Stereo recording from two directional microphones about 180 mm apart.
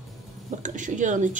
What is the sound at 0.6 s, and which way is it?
Speech, 45° right (ahead or behind).